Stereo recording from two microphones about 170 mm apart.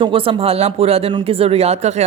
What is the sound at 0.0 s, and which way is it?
Speech, 30° right (ahead or behind).